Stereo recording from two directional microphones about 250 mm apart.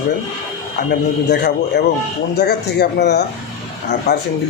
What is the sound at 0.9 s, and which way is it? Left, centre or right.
A man's voice, left.